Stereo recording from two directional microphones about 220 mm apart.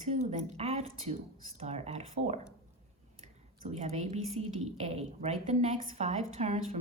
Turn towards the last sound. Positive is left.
turn(degrees=-30)  # may be behind; listen again after turning